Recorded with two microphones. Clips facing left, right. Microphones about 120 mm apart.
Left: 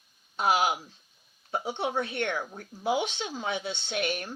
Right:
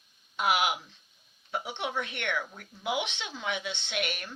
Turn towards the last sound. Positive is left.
turn(degrees=35)  # may be behind; listen again after turning